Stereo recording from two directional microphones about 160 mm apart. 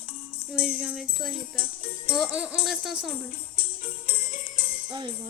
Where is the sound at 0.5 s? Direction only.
5° right (ahead or behind).